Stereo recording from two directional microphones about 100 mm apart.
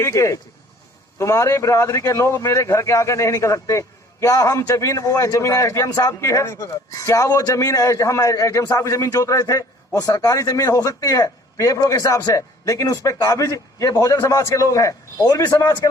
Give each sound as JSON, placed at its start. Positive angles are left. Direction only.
{"t": 0.0, "sound": "a man's voice", "side_deg": 30}